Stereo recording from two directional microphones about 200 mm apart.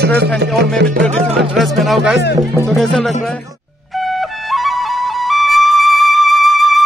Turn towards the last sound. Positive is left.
turn(degrees=0)  # may be behind; listen again after turning